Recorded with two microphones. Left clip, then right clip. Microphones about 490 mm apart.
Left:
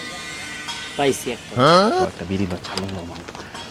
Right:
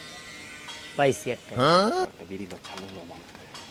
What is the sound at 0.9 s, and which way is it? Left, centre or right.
Speech, right.